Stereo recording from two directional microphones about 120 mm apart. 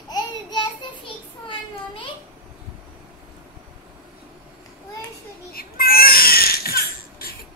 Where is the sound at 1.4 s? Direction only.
45° left (ahead or behind).